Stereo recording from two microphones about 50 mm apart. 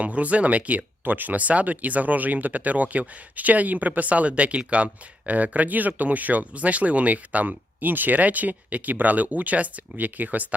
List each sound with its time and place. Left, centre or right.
0.0 s speech: right